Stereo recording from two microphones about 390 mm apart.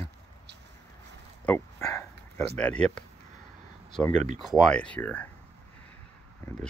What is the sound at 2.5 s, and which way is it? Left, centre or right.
Speech, centre.